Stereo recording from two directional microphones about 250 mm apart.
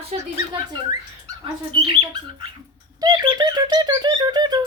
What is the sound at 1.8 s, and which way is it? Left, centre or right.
A woman's voice, centre.